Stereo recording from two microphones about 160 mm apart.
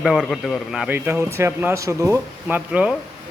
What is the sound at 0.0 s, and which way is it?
Speech, centre (ahead or behind).